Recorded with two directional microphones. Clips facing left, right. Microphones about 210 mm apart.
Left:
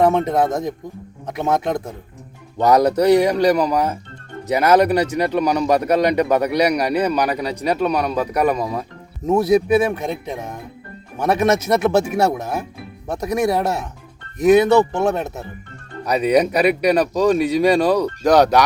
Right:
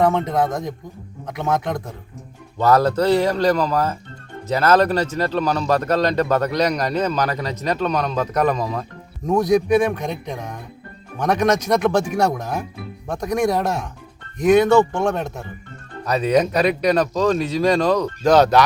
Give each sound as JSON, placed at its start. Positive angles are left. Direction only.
{"t": 0.4, "sound": "a man's voice", "side_deg": 25}